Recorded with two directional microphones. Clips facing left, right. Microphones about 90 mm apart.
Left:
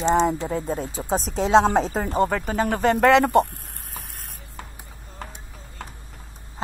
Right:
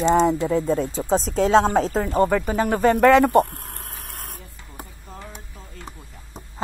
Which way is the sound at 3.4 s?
60° right (ahead or behind).